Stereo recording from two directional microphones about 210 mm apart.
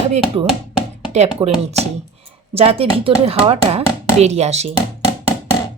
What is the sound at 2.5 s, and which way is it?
Speech, 30° right (ahead or behind).